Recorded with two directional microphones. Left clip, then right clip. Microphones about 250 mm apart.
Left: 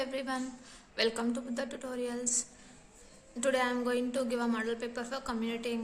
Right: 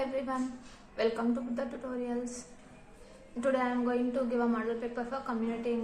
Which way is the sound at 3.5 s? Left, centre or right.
Left.